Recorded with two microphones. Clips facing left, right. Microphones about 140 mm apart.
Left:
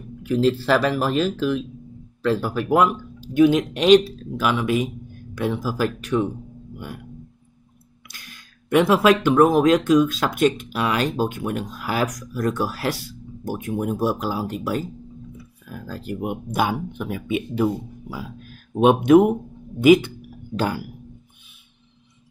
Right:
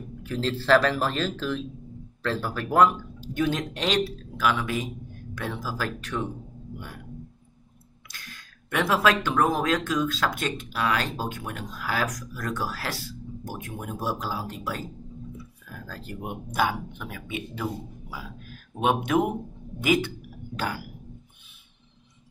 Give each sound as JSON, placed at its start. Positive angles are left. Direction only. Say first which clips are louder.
{"t": 0.2, "sound": "speech", "louder": "left 9 dB", "side_deg": 10}
{"t": 8.1, "sound": "speech", "louder": "even", "side_deg": 15}
{"t": 18.8, "sound": "speech", "louder": "left 10 dB", "side_deg": 20}